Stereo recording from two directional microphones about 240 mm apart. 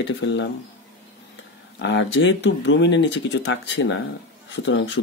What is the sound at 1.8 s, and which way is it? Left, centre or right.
Speech, left.